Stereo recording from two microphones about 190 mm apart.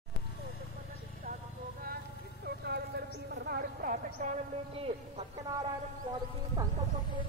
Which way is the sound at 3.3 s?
55° right (ahead or behind).